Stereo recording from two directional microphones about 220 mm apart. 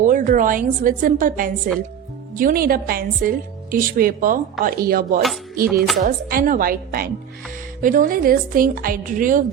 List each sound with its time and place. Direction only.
0.0 s a woman's voice: 35° right (ahead or behind)
5.6 s music: centre (ahead or behind)
6.0 s a woman's voice: 40° right (ahead or behind)